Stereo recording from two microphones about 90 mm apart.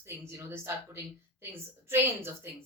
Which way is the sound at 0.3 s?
30° right (ahead or behind).